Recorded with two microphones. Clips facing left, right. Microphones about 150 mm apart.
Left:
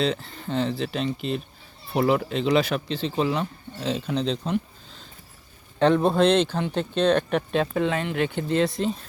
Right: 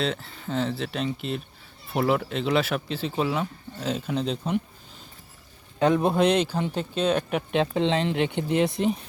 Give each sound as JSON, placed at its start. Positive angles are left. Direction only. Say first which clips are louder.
{"t": 0.0, "sound": "speech", "louder": "left 3 dB", "side_deg": 0}
{"t": 5.8, "sound": "speech", "louder": "left 2 dB", "side_deg": -15}
{"t": 7.5, "sound": "speech", "louder": "right 2 dB", "side_deg": -25}